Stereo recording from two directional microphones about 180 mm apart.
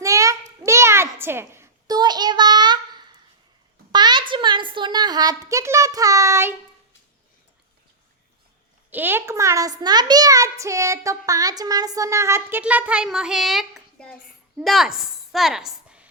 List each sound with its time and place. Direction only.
0.0 s a sound: 15° right (ahead or behind)
3.9 s a woman's voice: 25° right (ahead or behind)
8.9 s a child's voice: 10° right (ahead or behind)